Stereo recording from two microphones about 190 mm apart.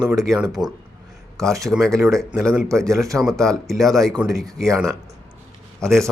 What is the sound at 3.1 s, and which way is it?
Speech, 5° right (ahead or behind).